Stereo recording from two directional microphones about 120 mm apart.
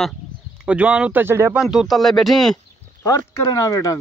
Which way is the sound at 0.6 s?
10° right (ahead or behind).